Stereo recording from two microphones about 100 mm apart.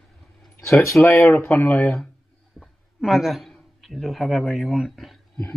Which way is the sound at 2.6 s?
Centre (ahead or behind).